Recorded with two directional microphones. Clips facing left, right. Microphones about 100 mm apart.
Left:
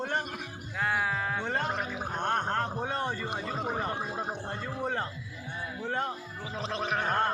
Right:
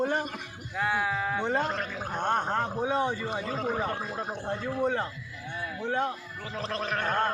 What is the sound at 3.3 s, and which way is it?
Speech, 10° left (ahead or behind).